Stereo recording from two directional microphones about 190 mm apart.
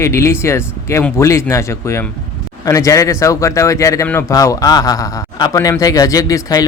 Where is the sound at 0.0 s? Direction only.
15° left (ahead or behind).